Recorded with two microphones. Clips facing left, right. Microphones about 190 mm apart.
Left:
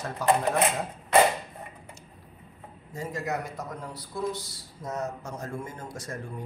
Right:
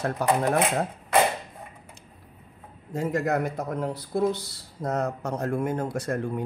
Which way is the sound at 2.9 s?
55° right (ahead or behind).